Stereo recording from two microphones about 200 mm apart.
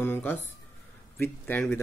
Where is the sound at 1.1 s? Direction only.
5° left (ahead or behind).